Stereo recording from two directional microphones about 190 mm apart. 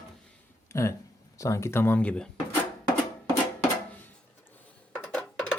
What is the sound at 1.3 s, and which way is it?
Speech, 15° left (ahead or behind).